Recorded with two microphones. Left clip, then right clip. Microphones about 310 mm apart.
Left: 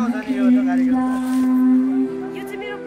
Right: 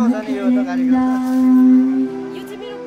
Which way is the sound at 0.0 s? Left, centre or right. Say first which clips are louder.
Right 2 dB; right.